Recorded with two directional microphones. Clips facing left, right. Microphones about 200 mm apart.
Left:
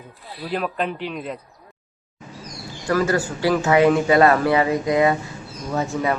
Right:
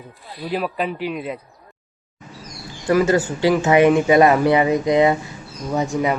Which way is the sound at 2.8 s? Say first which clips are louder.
Right 4 dB; 20° right (ahead or behind).